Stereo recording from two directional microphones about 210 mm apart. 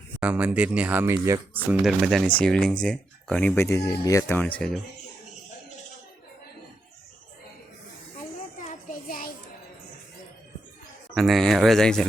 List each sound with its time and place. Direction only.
0.2 s speech: 5° right (ahead or behind)
1.8 s speech: centre (ahead or behind)
8.6 s child singing: 40° left (ahead or behind)
11.1 s speech: centre (ahead or behind)